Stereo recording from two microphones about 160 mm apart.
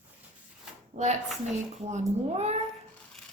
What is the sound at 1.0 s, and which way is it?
Speech, 50° right (ahead or behind).